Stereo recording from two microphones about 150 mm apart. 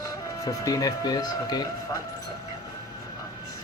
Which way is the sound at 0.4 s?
25° left (ahead or behind).